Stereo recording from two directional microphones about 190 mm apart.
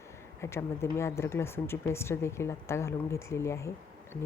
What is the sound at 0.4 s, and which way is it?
Speech, 15° left (ahead or behind).